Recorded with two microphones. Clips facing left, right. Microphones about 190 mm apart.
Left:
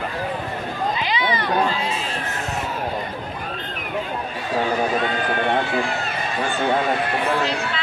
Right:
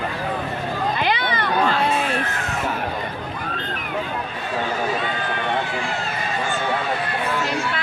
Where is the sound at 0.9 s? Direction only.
60° right (ahead or behind).